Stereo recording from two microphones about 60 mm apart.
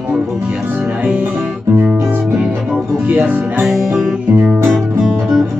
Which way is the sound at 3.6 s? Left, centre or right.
Centre.